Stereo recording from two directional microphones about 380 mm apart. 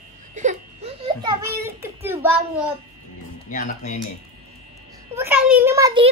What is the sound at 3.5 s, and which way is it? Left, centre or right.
Speech, left.